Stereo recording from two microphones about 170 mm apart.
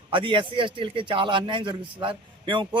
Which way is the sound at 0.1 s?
30° right (ahead or behind).